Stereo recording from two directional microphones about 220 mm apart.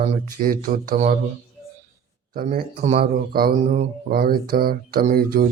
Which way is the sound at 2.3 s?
40° right (ahead or behind).